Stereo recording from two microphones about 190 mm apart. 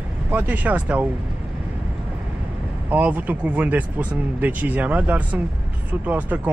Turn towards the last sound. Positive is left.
turn(degrees=-10)  # may be behind; listen again after turning